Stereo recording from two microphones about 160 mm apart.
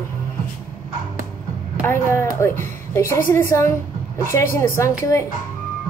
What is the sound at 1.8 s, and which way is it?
A woman's voice, 15° left (ahead or behind).